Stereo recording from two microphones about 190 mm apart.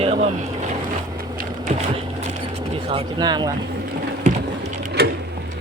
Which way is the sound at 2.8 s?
25° right (ahead or behind).